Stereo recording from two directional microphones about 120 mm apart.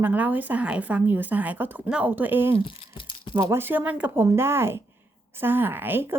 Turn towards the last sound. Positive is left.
turn(degrees=-15)  # may be behind; listen again after turning